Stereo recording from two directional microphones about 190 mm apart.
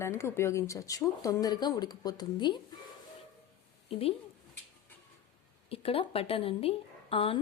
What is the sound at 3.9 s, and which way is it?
Speech, 30° left (ahead or behind).